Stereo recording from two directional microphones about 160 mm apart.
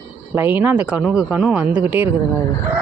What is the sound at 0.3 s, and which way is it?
Speech, 10° right (ahead or behind).